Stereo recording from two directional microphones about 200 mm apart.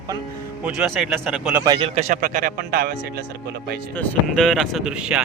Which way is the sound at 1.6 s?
20° right (ahead or behind).